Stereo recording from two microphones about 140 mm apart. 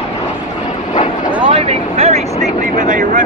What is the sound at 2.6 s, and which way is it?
Vehicle, 65° right (ahead or behind).